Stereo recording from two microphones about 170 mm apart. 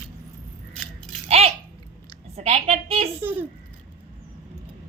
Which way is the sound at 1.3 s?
35° right (ahead or behind).